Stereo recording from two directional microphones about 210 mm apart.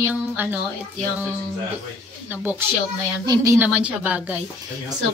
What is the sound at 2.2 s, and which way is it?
A woman's voice, 10° right (ahead or behind).